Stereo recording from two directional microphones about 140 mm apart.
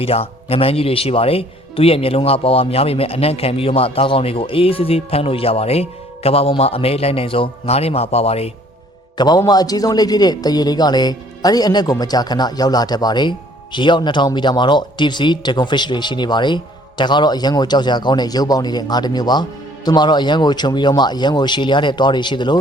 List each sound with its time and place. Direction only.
0.0 s speech: 45° left (ahead or behind)
9.1 s a man's voice: 30° left (ahead or behind)